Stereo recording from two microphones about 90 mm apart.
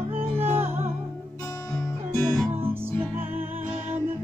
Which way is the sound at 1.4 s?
35° left (ahead or behind).